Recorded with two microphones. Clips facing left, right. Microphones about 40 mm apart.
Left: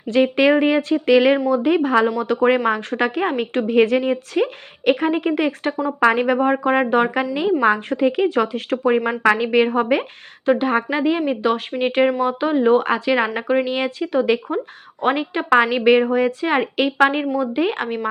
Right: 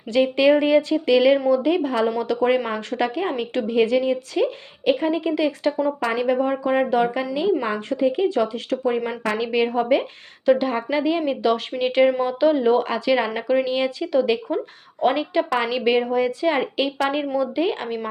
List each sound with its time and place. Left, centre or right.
0.1 s a woman's voice: left
2.2 s a woman's voice: left
2.6 s a woman's voice: left
6.0 s a woman's voice: left
12.8 s a woman's voice: left
13.3 s speech: left
13.7 s a woman's voice: left